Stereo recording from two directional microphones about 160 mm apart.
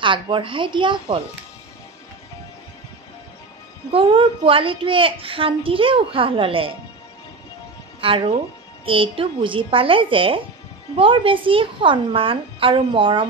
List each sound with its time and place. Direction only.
0.0 s a child's voice: 30° right (ahead or behind)
3.9 s a child's voice: 30° right (ahead or behind)
8.0 s a child's voice: 35° right (ahead or behind)